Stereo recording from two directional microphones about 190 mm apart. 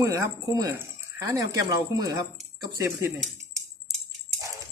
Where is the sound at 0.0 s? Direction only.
15° right (ahead or behind).